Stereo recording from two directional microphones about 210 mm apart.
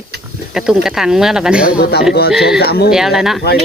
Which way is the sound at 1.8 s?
50° left (ahead or behind).